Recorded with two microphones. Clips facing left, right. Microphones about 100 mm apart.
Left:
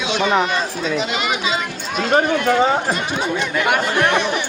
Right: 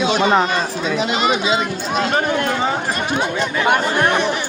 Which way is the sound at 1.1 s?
35° right (ahead or behind).